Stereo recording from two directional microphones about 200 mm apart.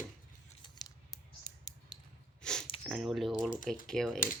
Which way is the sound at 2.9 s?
Centre (ahead or behind).